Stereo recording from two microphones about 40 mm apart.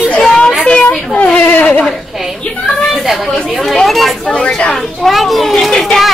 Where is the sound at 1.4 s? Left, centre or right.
Left.